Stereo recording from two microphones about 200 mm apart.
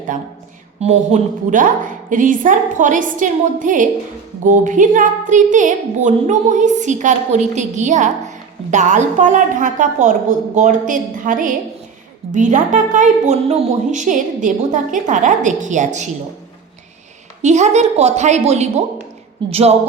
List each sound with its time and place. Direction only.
0.8 s a woman's voice: 35° right (ahead or behind)
17.4 s a woman's voice: 35° right (ahead or behind)